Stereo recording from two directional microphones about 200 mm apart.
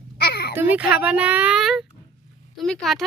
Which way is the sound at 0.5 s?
5° right (ahead or behind).